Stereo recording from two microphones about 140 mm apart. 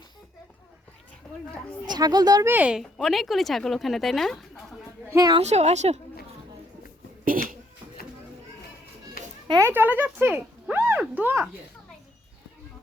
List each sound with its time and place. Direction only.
1.9 s speech: 30° right (ahead or behind)
2.5 s speech: 10° right (ahead or behind)
5.1 s speech: 30° right (ahead or behind)
5.4 s a woman's voice: 50° right (ahead or behind)
7.3 s speech: 85° right
9.2 s children playing: 90° left
9.6 s speech: 15° right (ahead or behind)